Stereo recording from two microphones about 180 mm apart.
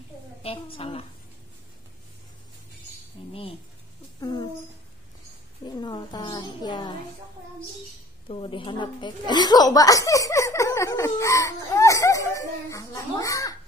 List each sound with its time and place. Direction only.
0.4 s a woman's voice: 30° left (ahead or behind)
3.2 s a sound: 30° left (ahead or behind)
4.2 s speech: 25° left (ahead or behind)
5.7 s a woman's voice: 25° left (ahead or behind)
8.3 s speech: 30° left (ahead or behind)